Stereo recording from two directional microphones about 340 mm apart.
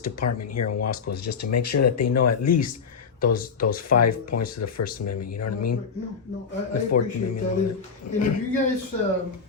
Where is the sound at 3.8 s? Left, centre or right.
Left.